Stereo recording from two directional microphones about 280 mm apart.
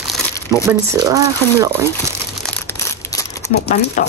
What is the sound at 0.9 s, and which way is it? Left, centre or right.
Speech, centre.